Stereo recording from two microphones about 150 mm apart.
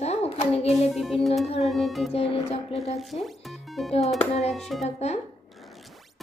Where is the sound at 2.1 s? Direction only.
40° left (ahead or behind).